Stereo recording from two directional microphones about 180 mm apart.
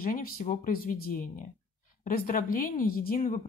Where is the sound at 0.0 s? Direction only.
50° left (ahead or behind).